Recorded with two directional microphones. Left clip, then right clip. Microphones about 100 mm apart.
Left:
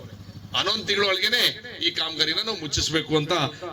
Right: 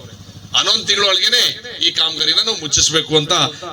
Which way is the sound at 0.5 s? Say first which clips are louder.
Right 8 dB; 40° left (ahead or behind).